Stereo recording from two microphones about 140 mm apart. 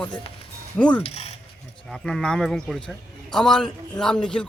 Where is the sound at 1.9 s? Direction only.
5° left (ahead or behind).